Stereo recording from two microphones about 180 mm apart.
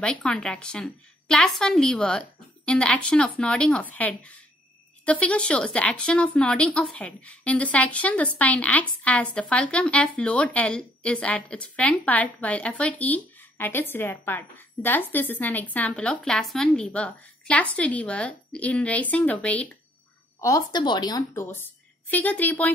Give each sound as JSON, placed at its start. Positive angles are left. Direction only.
{"t": 0.0, "sound": "a woman's voice", "side_deg": 5}
{"t": 20.3, "sound": "speech", "side_deg": 20}
{"t": 21.3, "sound": "a woman's voice", "side_deg": 10}